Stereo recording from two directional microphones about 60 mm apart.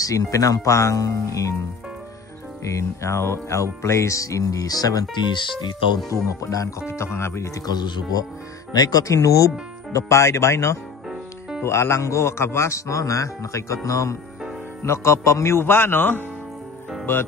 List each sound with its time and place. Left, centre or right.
0.0 s speech: left
2.6 s speech: left
6.4 s speech: left
6.9 s speech: left
7.6 s speech: left
14.8 s speech: left
15.6 s speech: left